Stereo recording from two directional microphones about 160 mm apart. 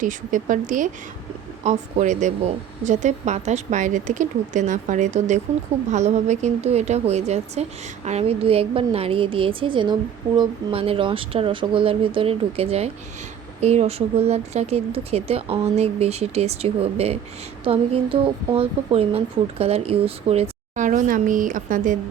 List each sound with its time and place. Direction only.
0.0 s a woman's voice: 55° right (ahead or behind)